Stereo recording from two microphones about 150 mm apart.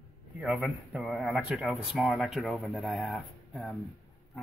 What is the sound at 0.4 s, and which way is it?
Speech, 5° right (ahead or behind).